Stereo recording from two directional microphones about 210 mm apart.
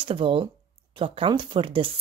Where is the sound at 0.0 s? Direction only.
25° right (ahead or behind).